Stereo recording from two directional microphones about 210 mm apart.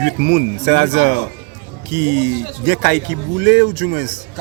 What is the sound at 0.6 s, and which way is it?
Speech, 50° right (ahead or behind).